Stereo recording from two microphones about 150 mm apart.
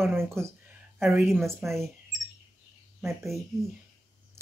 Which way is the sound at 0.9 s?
5° right (ahead or behind).